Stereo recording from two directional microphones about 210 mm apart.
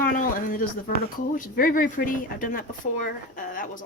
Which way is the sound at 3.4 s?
40° left (ahead or behind).